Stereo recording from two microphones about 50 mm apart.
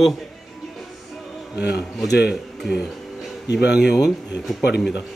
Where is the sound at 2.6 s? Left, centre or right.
Centre.